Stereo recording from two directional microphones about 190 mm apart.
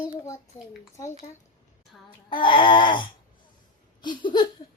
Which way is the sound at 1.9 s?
5° left (ahead or behind).